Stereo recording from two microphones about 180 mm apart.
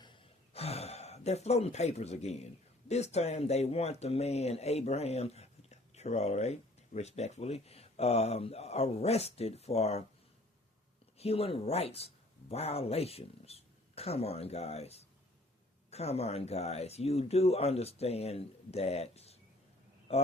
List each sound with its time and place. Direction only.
0.0 s a sound: 30° left (ahead or behind)
2.9 s speech: 35° left (ahead or behind)
11.2 s speech: 35° left (ahead or behind)